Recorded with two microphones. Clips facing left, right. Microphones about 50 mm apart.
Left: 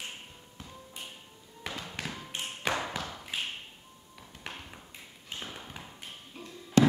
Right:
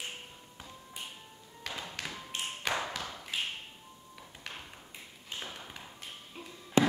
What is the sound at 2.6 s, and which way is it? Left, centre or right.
Thump, centre.